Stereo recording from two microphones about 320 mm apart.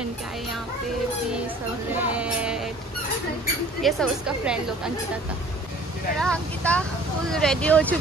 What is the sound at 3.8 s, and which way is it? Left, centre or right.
Speech, centre.